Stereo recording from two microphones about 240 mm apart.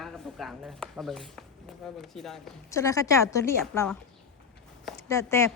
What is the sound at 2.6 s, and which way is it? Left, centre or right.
Speech, centre.